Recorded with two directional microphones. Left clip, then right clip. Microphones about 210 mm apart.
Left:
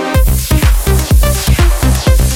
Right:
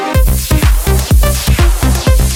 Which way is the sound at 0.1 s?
Centre (ahead or behind).